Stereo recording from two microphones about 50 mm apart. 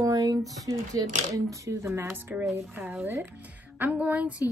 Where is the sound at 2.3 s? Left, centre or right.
Right.